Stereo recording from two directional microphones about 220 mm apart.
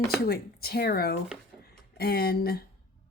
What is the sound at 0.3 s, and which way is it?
Speech, 45° left (ahead or behind).